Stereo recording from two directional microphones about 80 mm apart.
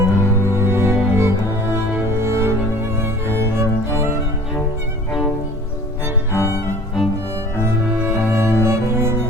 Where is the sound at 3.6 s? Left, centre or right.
Right.